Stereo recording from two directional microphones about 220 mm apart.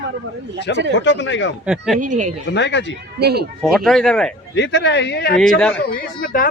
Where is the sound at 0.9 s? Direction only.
55° left (ahead or behind).